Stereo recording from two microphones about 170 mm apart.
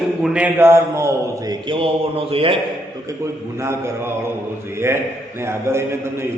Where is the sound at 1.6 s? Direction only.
30° right (ahead or behind).